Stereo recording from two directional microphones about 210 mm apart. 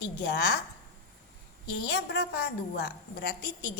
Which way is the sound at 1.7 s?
55° left (ahead or behind).